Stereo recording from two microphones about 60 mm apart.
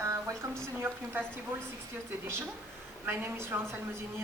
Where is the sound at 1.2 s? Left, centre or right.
Right.